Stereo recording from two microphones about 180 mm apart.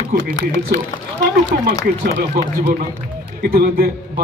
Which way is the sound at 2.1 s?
75° right (ahead or behind).